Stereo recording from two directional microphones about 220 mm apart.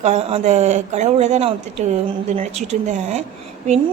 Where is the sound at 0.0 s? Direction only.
30° right (ahead or behind).